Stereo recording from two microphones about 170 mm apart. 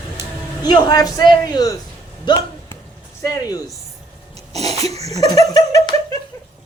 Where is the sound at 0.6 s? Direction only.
25° left (ahead or behind).